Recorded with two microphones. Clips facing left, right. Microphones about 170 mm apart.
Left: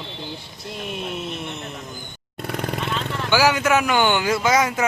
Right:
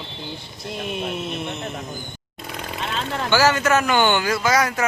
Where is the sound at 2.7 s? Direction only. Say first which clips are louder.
Right 1 dB; 60° left (ahead or behind).